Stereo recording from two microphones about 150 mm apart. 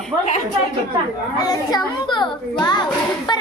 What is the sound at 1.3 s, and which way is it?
A child's voice, 25° left (ahead or behind).